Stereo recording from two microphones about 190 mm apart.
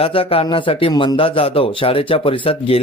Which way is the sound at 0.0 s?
30° left (ahead or behind).